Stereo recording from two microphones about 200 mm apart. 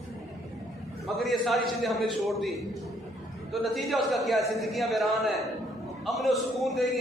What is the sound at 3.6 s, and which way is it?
A man's voice, centre (ahead or behind).